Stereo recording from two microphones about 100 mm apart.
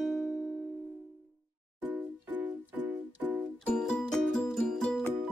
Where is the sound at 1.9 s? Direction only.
15° right (ahead or behind).